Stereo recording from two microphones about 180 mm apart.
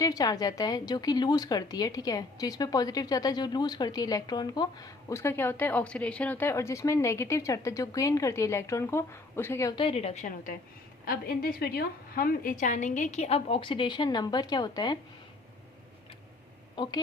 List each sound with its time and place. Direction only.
0.0 s a woman's voice: 20° left (ahead or behind)
9.7 s a woman's voice: 30° left (ahead or behind)
16.7 s a woman's voice: 25° left (ahead or behind)